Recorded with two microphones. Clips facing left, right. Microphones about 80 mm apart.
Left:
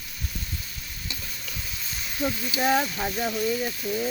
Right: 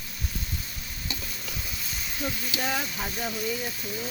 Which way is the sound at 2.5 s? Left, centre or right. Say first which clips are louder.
Left 9 dB; left.